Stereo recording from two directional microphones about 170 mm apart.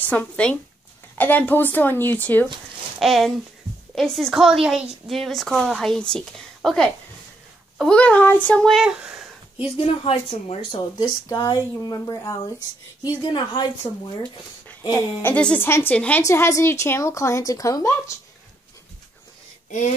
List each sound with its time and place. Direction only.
0.0 s a woman's voice: 5° left (ahead or behind)
3.0 s speech: centre (ahead or behind)
10.0 s speech: 35° left (ahead or behind)
11.2 s speech: 20° left (ahead or behind)
15.2 s a woman's voice: 10° left (ahead or behind)